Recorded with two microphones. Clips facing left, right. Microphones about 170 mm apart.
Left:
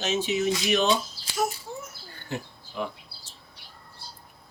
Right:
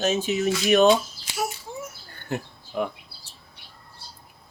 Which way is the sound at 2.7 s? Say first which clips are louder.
Right 5 dB; 55° right (ahead or behind).